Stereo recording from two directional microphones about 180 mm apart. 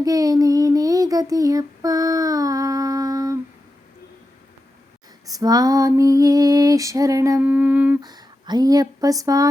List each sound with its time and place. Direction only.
0.0 s a sound: 20° right (ahead or behind)
5.2 s female singing: 20° right (ahead or behind)
8.0 s speech: 20° right (ahead or behind)